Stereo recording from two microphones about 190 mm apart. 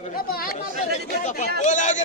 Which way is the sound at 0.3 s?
50° left (ahead or behind).